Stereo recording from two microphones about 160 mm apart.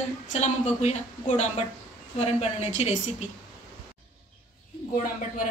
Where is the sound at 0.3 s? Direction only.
45° left (ahead or behind).